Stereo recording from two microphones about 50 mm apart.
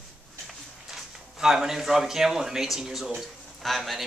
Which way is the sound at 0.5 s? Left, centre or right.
Centre.